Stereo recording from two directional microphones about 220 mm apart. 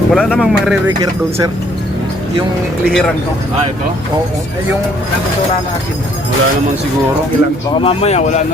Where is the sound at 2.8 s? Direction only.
Centre (ahead or behind).